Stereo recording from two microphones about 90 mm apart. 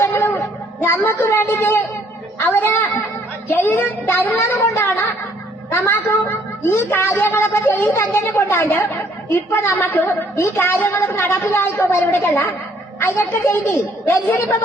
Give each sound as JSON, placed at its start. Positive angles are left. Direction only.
{"t": 0.0, "sound": "a sound", "side_deg": 25}
{"t": 0.8, "sound": "a woman's voice", "side_deg": 25}
{"t": 4.4, "sound": "a woman's voice", "side_deg": 35}